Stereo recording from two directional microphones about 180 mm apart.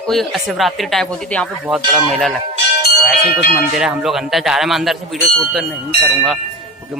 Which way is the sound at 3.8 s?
Centre (ahead or behind).